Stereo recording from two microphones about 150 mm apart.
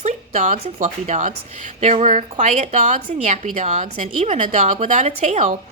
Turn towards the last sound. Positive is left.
turn(degrees=-50)  # may be behind; listen again after turning